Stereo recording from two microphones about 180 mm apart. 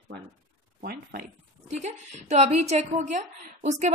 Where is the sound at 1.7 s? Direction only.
40° right (ahead or behind).